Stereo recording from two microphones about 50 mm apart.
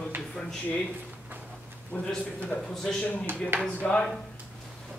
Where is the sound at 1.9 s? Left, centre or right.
Left.